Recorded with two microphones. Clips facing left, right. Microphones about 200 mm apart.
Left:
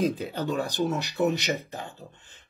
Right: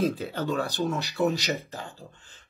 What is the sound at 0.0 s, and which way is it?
Speech, 15° left (ahead or behind).